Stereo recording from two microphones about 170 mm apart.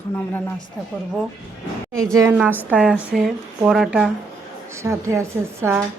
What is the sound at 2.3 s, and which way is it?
Speech, 5° right (ahead or behind).